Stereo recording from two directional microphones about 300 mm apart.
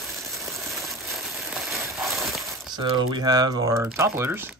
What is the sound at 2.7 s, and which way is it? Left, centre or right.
Speech, centre.